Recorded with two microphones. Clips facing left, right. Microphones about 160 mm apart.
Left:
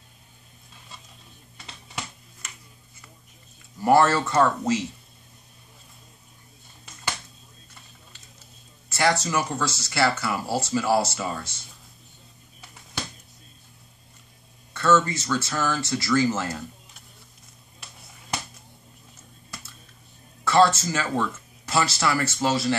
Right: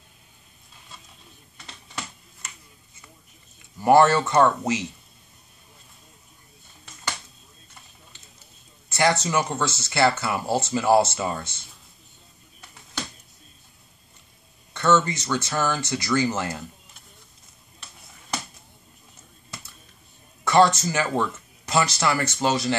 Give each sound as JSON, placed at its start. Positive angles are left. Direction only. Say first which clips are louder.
{"t": 3.8, "sound": "speech", "louder": "right 2 dB", "side_deg": -20}
{"t": 8.8, "sound": "speech", "louder": "right 1 dB", "side_deg": -20}
{"t": 14.7, "sound": "speech", "louder": "even", "side_deg": -20}
{"t": 20.4, "sound": "speech", "louder": "right 1 dB", "side_deg": -15}